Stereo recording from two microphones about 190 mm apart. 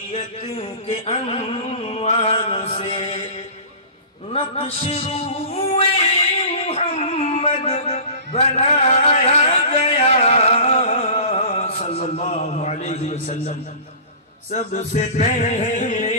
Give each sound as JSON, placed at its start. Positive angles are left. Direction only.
{"t": 0.1, "sound": "music", "side_deg": 30}
{"t": 4.3, "sound": "music", "side_deg": 30}
{"t": 6.3, "sound": "a sound", "side_deg": 35}
{"t": 14.5, "sound": "music", "side_deg": 40}